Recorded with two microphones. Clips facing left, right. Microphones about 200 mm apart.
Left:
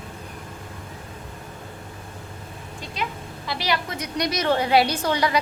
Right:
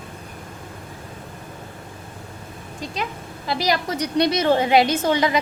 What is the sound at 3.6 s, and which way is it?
A woman's voice, 40° right (ahead or behind).